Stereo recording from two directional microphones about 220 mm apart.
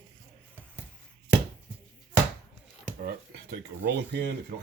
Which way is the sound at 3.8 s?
50° right (ahead or behind).